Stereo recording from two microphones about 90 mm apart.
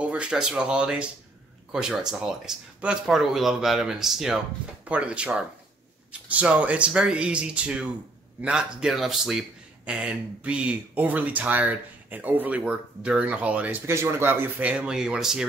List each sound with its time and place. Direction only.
0.0 s speech: 10° right (ahead or behind)
4.8 s speech: 15° right (ahead or behind)
13.8 s speech: 25° right (ahead or behind)
14.7 s speech: 10° right (ahead or behind)